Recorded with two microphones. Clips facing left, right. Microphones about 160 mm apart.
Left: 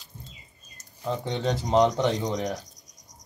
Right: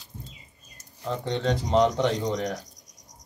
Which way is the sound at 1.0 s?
5° left (ahead or behind).